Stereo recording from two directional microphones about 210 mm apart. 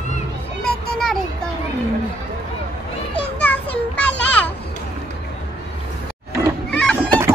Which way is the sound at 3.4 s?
5° left (ahead or behind).